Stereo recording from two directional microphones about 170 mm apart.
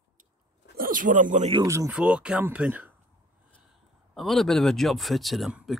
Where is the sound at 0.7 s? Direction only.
55° right (ahead or behind).